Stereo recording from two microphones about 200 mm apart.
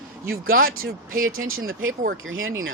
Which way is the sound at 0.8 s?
45° right (ahead or behind).